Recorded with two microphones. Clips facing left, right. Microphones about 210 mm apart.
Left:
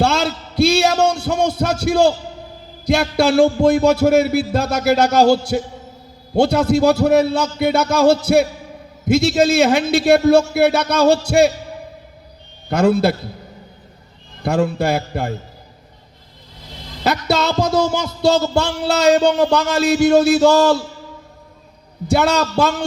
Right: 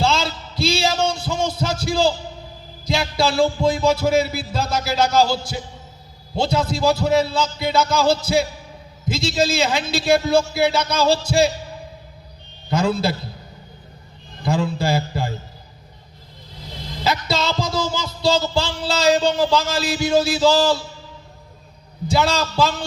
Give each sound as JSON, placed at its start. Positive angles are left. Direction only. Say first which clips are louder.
{"t": 0.0, "sound": "a sound", "louder": "left 4 dB", "side_deg": 65}
{"t": 2.8, "sound": "a man's voice", "louder": "left 5 dB", "side_deg": 65}
{"t": 12.7, "sound": "a man's voice", "louder": "left 5 dB", "side_deg": 65}
{"t": 14.4, "sound": "a man's voice", "louder": "left 4 dB", "side_deg": 65}
{"t": 17.0, "sound": "a man's voice", "louder": "left 4 dB", "side_deg": 65}
{"t": 22.0, "sound": "a man's voice", "louder": "left 4 dB", "side_deg": 65}